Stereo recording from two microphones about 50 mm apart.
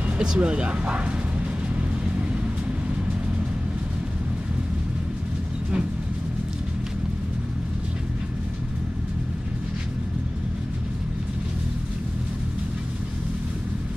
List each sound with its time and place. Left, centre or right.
0.2 s speech: centre